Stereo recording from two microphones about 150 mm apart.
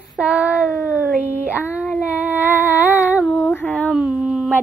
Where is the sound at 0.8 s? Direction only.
10° right (ahead or behind).